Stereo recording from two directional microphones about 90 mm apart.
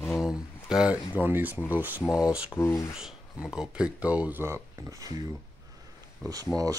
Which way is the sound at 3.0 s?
5° right (ahead or behind).